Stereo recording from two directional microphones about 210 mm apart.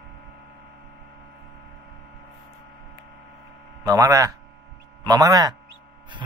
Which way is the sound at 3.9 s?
15° right (ahead or behind).